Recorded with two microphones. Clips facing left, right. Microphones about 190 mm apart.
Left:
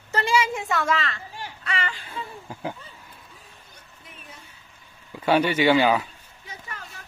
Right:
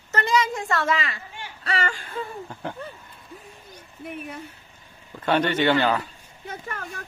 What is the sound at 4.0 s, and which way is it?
Speech, 60° right (ahead or behind).